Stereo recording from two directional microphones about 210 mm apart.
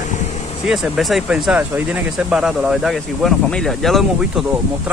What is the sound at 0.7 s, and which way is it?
Speech, centre (ahead or behind).